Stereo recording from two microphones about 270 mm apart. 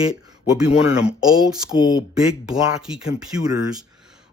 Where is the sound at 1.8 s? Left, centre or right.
Centre.